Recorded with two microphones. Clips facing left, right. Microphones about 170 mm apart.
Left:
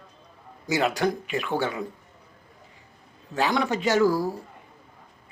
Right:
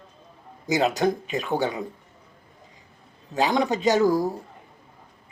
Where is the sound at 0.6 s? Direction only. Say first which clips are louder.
Right 2 dB; 20° right (ahead or behind).